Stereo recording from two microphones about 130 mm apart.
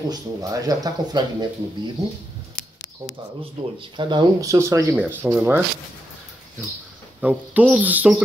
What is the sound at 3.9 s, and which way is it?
Speech, 35° right (ahead or behind).